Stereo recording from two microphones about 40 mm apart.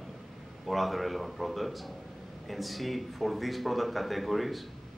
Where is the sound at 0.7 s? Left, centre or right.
Centre.